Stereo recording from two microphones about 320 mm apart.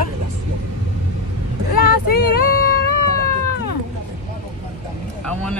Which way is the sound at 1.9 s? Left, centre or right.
Left.